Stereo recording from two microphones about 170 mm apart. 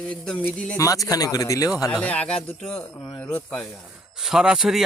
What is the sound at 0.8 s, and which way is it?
Speech, 20° left (ahead or behind).